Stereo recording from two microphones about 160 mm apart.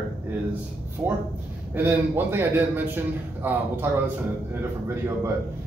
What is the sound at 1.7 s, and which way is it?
A man's voice, 10° right (ahead or behind).